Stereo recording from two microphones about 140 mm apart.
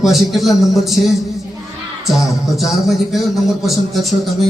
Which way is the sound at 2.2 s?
Centre (ahead or behind).